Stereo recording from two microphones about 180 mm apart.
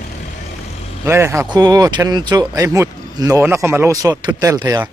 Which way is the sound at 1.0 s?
15° right (ahead or behind).